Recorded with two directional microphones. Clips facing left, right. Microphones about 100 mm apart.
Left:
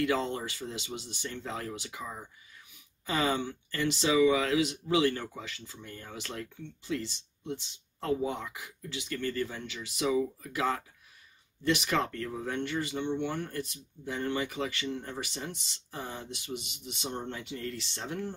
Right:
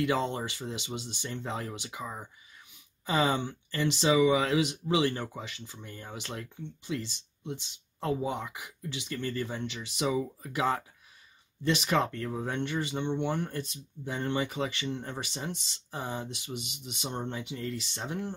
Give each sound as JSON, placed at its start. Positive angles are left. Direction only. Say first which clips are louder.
{"t": 0.0, "sound": "speech", "louder": "right 1 dB", "side_deg": -20}